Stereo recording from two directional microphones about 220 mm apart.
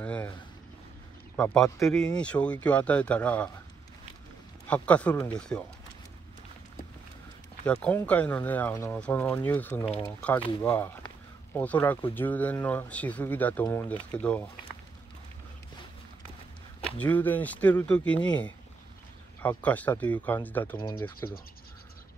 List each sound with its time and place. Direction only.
0.0 s a sound: 5° left (ahead or behind)
1.3 s speech: 5° left (ahead or behind)
4.6 s speech: 5° left (ahead or behind)
7.6 s speech: 5° left (ahead or behind)
9.8 s speech: 20° left (ahead or behind)
10.6 s speech: 5° left (ahead or behind)
17.0 s speech: 10° left (ahead or behind)
19.4 s speech: 5° left (ahead or behind)